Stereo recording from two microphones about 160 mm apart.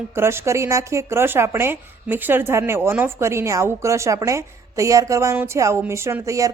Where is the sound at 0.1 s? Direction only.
15° right (ahead or behind).